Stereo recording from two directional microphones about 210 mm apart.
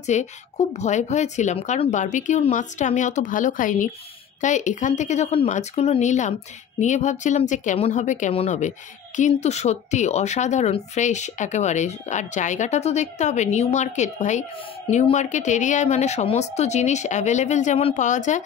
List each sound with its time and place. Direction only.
0.0 s speech: 35° left (ahead or behind)